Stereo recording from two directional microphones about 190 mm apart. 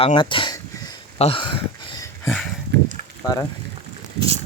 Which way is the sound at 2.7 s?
65° right (ahead or behind).